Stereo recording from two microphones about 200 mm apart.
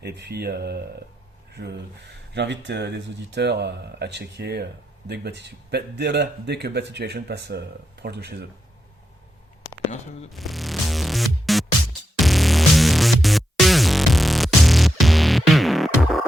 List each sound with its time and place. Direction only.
0.0 s speech: 55° right (ahead or behind)
10.3 s music: centre (ahead or behind)